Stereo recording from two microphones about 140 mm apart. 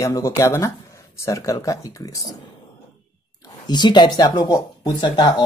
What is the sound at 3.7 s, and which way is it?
Speech, 30° left (ahead or behind).